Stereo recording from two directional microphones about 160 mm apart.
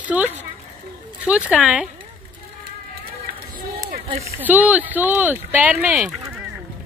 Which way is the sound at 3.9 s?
40° right (ahead or behind).